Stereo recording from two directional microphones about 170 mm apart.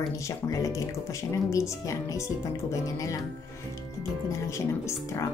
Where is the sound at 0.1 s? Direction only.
20° left (ahead or behind).